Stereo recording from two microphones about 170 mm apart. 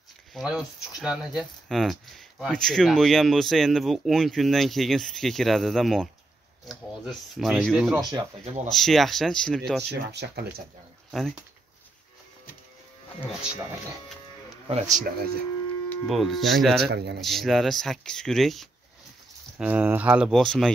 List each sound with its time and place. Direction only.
0.3 s speech: 5° right (ahead or behind)
10.1 s speech: 75° right (ahead or behind)
11.1 s speech: centre (ahead or behind)
13.3 s speech: 5° right (ahead or behind)
14.7 s speech: 45° right (ahead or behind); by 15.4 s 60° right (ahead or behind)
16.1 s speech: centre (ahead or behind)
16.9 s speech: 80° right
17.2 s speech: centre (ahead or behind)
19.6 s speech: 10° right (ahead or behind)